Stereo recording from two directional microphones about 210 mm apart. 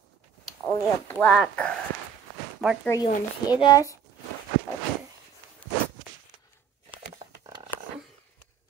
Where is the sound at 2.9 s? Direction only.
15° left (ahead or behind).